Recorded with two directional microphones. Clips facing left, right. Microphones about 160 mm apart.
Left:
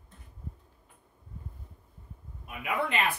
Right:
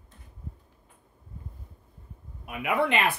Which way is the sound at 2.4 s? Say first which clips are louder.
Right 5 dB; 75° right (ahead or behind).